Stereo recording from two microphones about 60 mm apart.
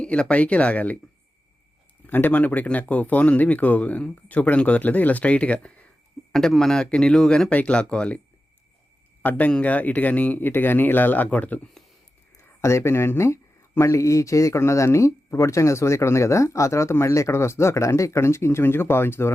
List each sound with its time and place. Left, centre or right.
0.0 s speech: centre
2.0 s speech: left
6.3 s speech: centre
9.5 s speech: left
12.4 s speech: left